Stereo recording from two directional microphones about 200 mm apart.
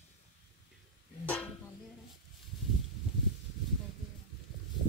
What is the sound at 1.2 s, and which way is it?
Music, 5° left (ahead or behind).